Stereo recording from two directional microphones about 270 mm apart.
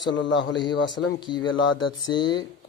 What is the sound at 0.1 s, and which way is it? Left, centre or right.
A man's voice, left.